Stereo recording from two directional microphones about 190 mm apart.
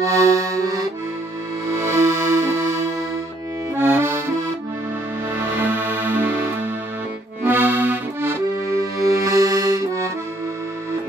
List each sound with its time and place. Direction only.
0.0 s accordion: 15° right (ahead or behind)
1.7 s music: 15° right (ahead or behind)
3.7 s accordion: 10° right (ahead or behind)
5.3 s music: 10° right (ahead or behind)
7.4 s accordion: 10° right (ahead or behind)